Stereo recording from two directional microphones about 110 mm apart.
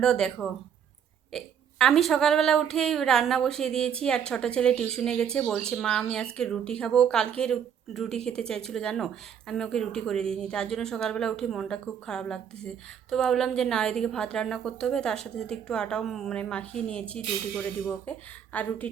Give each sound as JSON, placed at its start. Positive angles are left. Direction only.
{"t": 0.0, "sound": "a woman's voice", "side_deg": 5}